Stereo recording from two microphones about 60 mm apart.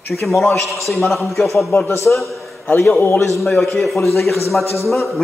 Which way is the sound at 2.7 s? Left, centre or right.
Left.